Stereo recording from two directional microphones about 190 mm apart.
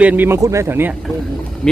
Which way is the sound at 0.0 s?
10° right (ahead or behind).